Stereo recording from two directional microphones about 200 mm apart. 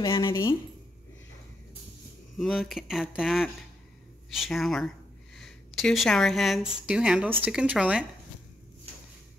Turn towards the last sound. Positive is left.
turn(degrees=-5)  # may be behind; listen again after turning